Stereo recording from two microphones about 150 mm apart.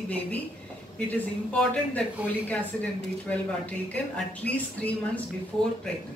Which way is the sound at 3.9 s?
10° left (ahead or behind).